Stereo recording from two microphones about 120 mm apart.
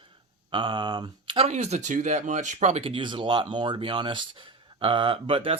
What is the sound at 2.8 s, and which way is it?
Speech, 45° right (ahead or behind).